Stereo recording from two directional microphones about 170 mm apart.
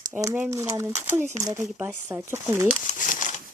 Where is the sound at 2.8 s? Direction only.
50° left (ahead or behind).